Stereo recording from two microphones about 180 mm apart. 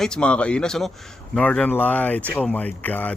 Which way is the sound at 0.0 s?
5° left (ahead or behind).